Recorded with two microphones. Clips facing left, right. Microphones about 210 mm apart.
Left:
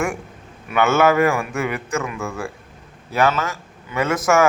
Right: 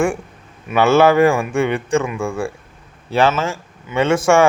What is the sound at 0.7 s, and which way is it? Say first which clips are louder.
Speech: right 4 dB; 30° right (ahead or behind).